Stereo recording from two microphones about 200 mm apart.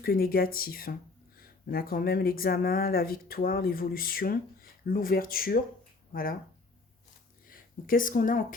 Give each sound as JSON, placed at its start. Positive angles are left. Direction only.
{"t": 0.0, "sound": "speech", "side_deg": 50}
{"t": 7.4, "sound": "speech", "side_deg": 45}